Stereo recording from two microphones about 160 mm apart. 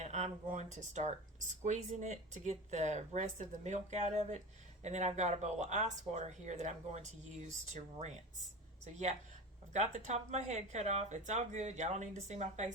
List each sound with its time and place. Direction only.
0.0 s speech: 45° right (ahead or behind)
9.7 s speech: 45° right (ahead or behind)